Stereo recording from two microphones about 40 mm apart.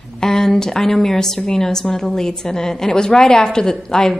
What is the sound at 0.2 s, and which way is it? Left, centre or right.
A woman's voice, centre.